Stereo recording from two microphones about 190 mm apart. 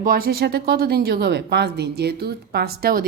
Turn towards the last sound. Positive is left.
turn(degrees=-50)  # may be behind; listen again after turning